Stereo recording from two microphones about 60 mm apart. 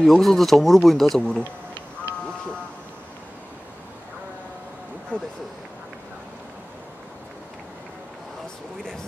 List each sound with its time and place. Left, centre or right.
0.0 s speech: centre
5.1 s speech: centre